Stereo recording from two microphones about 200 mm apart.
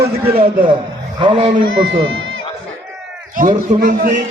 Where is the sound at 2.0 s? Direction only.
80° right.